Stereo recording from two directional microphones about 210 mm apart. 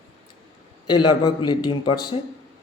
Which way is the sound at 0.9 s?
20° left (ahead or behind).